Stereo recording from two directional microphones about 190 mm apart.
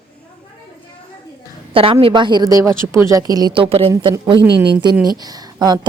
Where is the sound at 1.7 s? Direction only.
30° right (ahead or behind).